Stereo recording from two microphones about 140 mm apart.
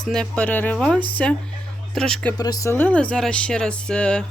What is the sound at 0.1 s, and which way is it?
Speech, 5° left (ahead or behind).